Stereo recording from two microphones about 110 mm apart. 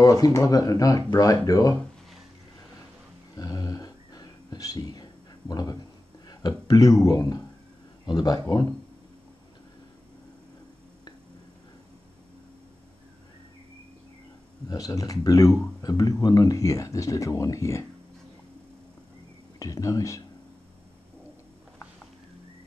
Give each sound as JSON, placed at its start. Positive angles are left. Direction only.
{"t": 0.0, "sound": "speech", "side_deg": 30}
{"t": 3.3, "sound": "a sound", "side_deg": 35}
{"t": 6.2, "sound": "speech", "side_deg": 35}
{"t": 14.7, "sound": "speech", "side_deg": 35}
{"t": 19.6, "sound": "speech", "side_deg": 30}